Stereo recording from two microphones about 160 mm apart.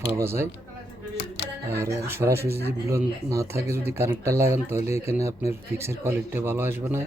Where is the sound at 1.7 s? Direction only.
15° right (ahead or behind).